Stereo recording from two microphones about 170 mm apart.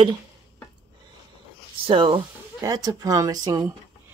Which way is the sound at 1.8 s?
30° right (ahead or behind).